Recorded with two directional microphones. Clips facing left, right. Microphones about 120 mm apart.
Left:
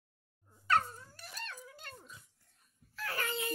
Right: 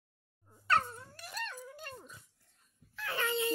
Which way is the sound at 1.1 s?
60° right (ahead or behind).